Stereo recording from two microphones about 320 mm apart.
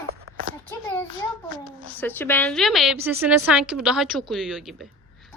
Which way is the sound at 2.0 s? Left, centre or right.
Centre.